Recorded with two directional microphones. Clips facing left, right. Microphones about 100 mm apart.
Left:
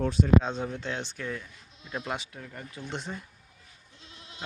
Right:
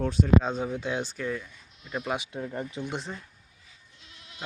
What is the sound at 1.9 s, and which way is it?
Speech, 15° right (ahead or behind).